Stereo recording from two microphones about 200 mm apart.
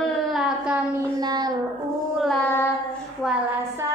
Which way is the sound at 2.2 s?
5° left (ahead or behind).